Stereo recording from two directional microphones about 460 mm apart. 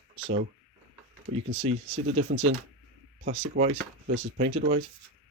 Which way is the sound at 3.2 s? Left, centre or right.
Centre.